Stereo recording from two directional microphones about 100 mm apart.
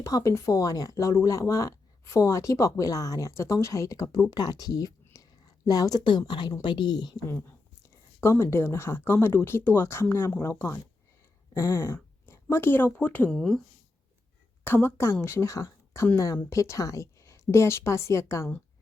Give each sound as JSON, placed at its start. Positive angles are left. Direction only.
{"t": 0.0, "sound": "speech", "side_deg": 35}
{"t": 5.0, "sound": "a sound", "side_deg": 35}
{"t": 6.6, "sound": "speech", "side_deg": 50}
{"t": 8.2, "sound": "speech", "side_deg": 25}
{"t": 13.3, "sound": "speech", "side_deg": 5}
{"t": 14.6, "sound": "a woman's voice", "side_deg": 20}